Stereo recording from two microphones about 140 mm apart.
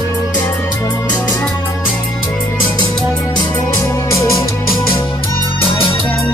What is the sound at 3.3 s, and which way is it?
Music, 25° left (ahead or behind).